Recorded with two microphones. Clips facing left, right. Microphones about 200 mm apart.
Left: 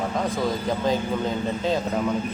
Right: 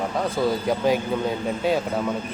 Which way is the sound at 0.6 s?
10° right (ahead or behind).